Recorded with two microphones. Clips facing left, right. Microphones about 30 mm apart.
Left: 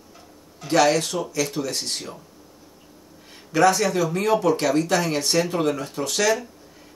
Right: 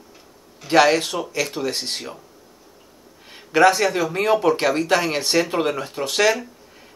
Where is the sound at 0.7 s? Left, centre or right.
Right.